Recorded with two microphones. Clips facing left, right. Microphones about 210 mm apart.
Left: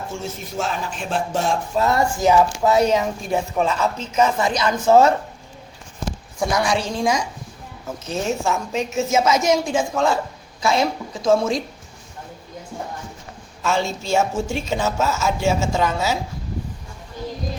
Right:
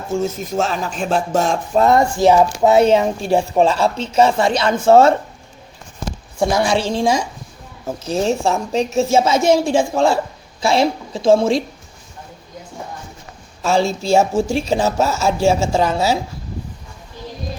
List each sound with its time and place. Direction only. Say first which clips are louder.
0.1 s a woman's voice: right 9 dB; 40° right (ahead or behind)
6.4 s a woman's voice: right 4 dB; 25° right (ahead or behind)
13.6 s speech: right 5 dB; 35° right (ahead or behind)